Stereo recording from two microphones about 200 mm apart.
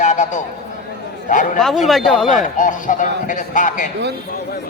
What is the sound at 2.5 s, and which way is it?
A man's voice, 40° left (ahead or behind).